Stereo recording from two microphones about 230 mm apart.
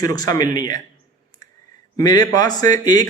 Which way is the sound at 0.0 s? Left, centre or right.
Centre.